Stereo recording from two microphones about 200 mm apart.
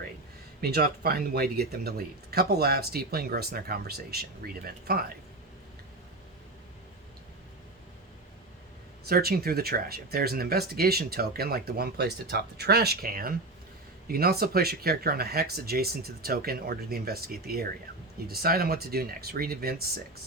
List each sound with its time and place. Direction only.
0.6 s speech: 50° right (ahead or behind)
9.0 s speech: 50° right (ahead or behind)